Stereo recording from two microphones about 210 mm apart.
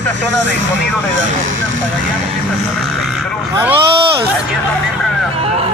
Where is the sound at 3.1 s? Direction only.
5° right (ahead or behind).